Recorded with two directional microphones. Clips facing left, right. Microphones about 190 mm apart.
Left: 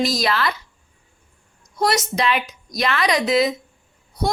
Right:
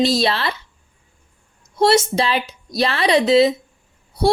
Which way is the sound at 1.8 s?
30° right (ahead or behind).